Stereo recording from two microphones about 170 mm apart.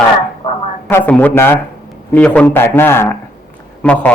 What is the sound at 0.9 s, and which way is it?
Speech, 10° left (ahead or behind).